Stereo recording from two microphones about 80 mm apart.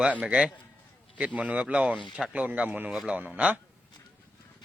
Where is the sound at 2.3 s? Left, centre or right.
Centre.